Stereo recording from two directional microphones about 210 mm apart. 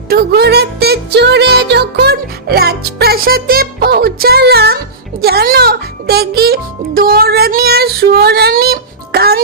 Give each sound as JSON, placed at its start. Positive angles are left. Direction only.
{"t": 0.1, "sound": "music", "side_deg": -50}